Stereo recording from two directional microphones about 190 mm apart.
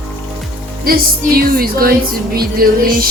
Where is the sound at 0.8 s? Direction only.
50° right (ahead or behind).